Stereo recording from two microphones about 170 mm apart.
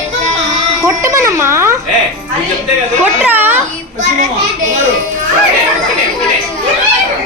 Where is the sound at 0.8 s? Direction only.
15° right (ahead or behind).